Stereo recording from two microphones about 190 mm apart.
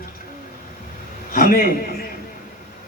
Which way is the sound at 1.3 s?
50° left (ahead or behind).